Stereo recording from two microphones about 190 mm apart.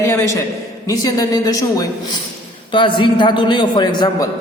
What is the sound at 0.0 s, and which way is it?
A man's voice, 15° left (ahead or behind).